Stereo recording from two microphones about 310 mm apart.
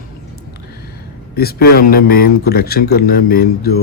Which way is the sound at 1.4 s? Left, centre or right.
Left.